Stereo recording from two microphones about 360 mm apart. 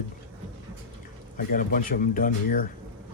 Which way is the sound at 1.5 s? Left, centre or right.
Left.